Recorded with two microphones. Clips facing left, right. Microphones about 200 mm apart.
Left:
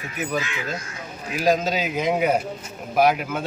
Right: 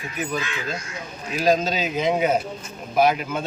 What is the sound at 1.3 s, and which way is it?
Speech, 15° left (ahead or behind).